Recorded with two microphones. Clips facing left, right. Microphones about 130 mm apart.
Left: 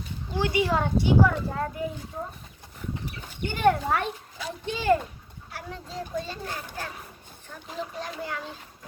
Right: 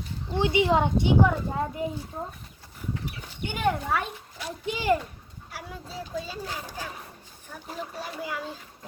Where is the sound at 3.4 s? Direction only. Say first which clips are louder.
Left 4 dB; 5° right (ahead or behind).